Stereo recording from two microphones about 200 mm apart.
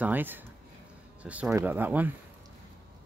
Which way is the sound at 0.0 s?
10° right (ahead or behind).